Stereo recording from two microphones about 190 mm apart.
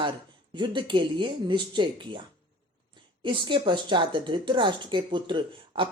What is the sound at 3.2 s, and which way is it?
A woman's voice, 25° right (ahead or behind).